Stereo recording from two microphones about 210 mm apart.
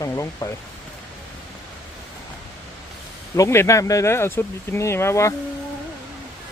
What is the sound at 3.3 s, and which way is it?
Speech, 15° left (ahead or behind).